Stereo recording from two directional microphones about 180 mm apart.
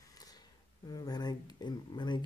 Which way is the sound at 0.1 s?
20° left (ahead or behind).